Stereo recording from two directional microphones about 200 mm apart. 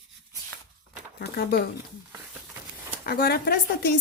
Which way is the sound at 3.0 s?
50° left (ahead or behind).